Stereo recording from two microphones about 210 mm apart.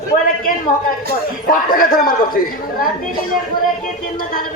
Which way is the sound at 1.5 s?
45° left (ahead or behind).